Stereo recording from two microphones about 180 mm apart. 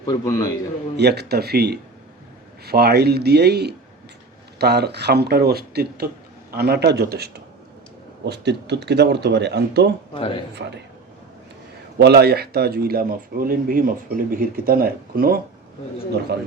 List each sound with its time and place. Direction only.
0.0 s a man's voice: 20° left (ahead or behind)
0.9 s speech: 65° right (ahead or behind)
10.2 s speech: 30° left (ahead or behind)
11.9 s speech: 65° right (ahead or behind)